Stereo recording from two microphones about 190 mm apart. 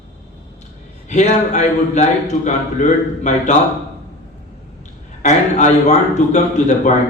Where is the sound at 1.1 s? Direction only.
40° left (ahead or behind).